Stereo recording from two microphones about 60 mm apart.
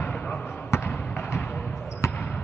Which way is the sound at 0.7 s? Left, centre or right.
Left.